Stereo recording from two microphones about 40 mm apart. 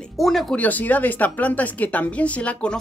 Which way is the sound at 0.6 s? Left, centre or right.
Left.